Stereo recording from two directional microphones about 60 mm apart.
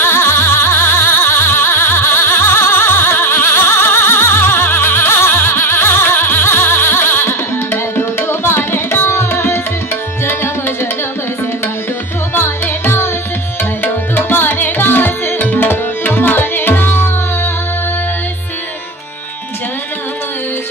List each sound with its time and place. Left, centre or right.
0.0 s music: left
10.2 s tabla: left
12.4 s music: left
13.8 s tabla: left